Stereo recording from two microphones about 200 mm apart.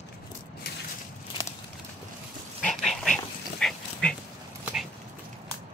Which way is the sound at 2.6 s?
Centre (ahead or behind).